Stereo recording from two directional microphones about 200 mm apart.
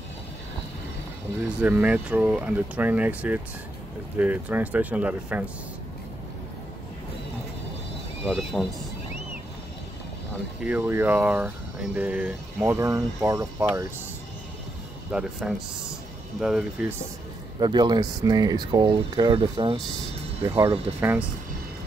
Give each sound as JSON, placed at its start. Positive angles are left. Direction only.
{"t": 1.6, "sound": "speech", "side_deg": -5}
{"t": 8.3, "sound": "speech", "side_deg": 0}
{"t": 10.6, "sound": "speech", "side_deg": -5}
{"t": 15.0, "sound": "speech", "side_deg": -5}
{"t": 17.6, "sound": "speech", "side_deg": -20}
{"t": 20.4, "sound": "speech", "side_deg": -15}